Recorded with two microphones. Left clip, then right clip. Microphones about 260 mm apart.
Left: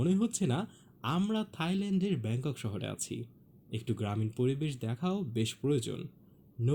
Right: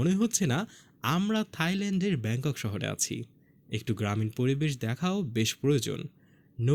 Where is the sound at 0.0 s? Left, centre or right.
Right.